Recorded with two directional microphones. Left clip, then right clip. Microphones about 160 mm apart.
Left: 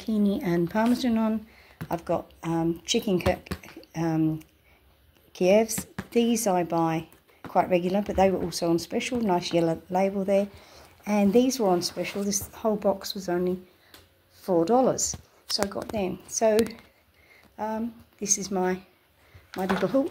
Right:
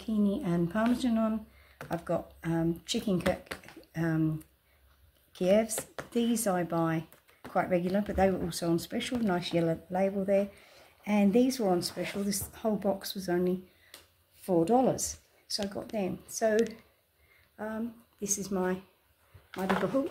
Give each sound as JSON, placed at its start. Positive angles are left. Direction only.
{"t": 0.0, "sound": "speech", "side_deg": 30}
{"t": 1.8, "sound": "speech", "side_deg": 15}
{"t": 3.8, "sound": "a sound", "side_deg": 15}
{"t": 5.3, "sound": "speech", "side_deg": 15}
{"t": 17.6, "sound": "speech", "side_deg": 20}
{"t": 19.5, "sound": "speech", "side_deg": 35}